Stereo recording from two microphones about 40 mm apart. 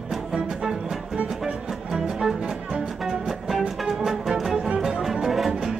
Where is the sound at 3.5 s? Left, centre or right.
Centre.